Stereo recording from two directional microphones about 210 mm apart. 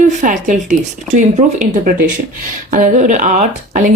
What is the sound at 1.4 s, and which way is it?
Speech, 30° right (ahead or behind).